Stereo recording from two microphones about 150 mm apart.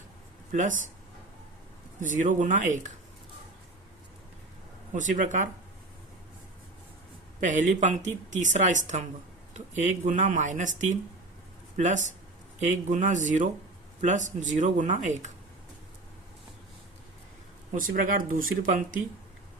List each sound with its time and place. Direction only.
2.0 s speech: 60° right (ahead or behind)
4.9 s speech: 60° right (ahead or behind)
7.4 s speech: 55° right (ahead or behind)
17.7 s speech: 65° right (ahead or behind)